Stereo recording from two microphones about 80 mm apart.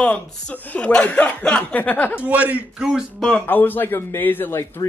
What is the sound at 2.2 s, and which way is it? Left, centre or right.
Speech, centre.